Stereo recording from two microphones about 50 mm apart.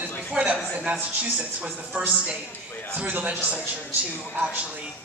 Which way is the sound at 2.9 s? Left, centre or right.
Right.